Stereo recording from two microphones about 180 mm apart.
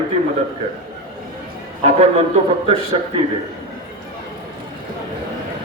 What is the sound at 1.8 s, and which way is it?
A man's voice, 35° right (ahead or behind).